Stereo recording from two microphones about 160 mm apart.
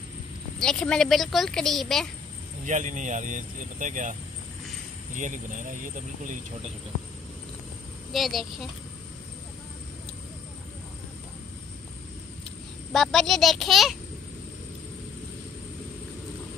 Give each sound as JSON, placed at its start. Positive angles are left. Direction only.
{"t": 0.6, "sound": "a woman's voice", "side_deg": 5}
{"t": 2.6, "sound": "speech", "side_deg": -50}
{"t": 8.1, "sound": "a woman's voice", "side_deg": 0}
{"t": 12.9, "sound": "a woman's voice", "side_deg": 0}